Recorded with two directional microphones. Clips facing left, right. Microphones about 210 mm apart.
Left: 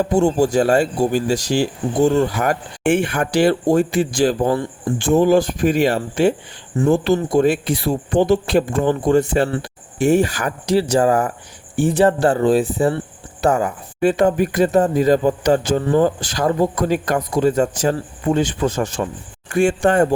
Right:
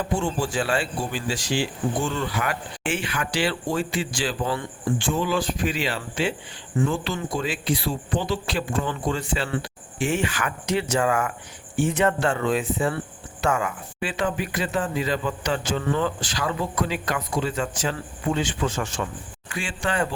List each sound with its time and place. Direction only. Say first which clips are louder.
0.0 s speech: left 10 dB; 40° left (ahead or behind)